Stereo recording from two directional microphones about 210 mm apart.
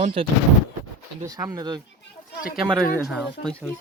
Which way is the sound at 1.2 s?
20° right (ahead or behind).